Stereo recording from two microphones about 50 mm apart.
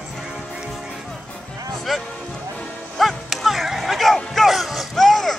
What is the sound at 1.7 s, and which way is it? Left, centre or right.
Music, centre.